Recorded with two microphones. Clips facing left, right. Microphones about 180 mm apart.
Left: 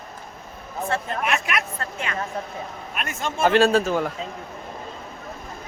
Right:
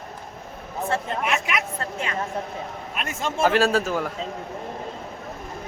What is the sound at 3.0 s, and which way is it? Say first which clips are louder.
Speech: right 1 dB; 30° right (ahead or behind).